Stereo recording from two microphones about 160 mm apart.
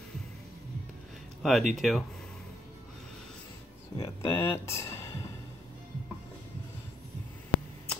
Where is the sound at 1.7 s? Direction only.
Centre (ahead or behind).